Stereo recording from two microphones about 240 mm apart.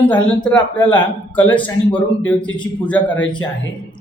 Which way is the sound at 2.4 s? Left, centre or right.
Centre.